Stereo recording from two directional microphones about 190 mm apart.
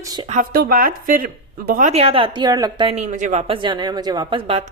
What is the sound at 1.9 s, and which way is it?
A woman's voice, 30° right (ahead or behind).